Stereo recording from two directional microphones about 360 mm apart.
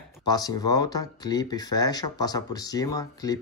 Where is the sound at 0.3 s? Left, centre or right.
Centre.